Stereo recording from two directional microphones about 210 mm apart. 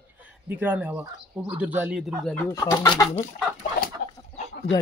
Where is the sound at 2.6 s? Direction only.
20° left (ahead or behind).